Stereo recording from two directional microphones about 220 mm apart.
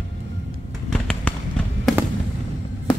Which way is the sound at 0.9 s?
5° left (ahead or behind).